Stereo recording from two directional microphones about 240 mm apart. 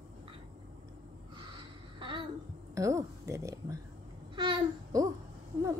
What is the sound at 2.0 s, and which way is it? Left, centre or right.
Babbling, right.